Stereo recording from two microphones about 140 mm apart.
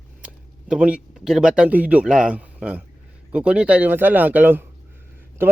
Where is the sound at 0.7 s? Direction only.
5° right (ahead or behind).